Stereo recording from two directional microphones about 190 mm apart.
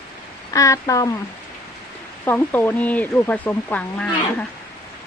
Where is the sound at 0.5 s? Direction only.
15° left (ahead or behind).